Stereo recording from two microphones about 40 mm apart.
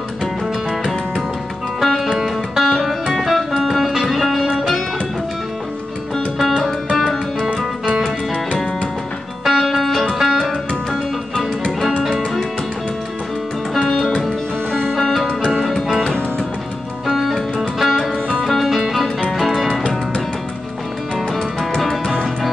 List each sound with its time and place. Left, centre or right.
1.8 s music: centre
2.7 s music: centre
6.6 s music: centre
9.4 s music: centre
10.9 s music: centre
15.0 s music: centre
17.0 s music: centre
21.7 s music: centre